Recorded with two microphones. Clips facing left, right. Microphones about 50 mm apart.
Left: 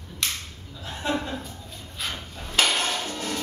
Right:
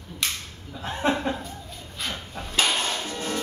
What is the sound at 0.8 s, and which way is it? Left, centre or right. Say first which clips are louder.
Speech: right 4 dB; right.